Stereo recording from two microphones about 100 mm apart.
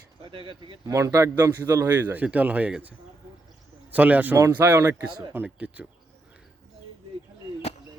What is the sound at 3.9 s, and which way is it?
Speech, 15° right (ahead or behind).